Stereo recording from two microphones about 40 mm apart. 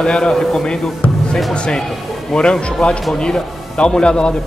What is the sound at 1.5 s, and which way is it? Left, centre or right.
Speech, left.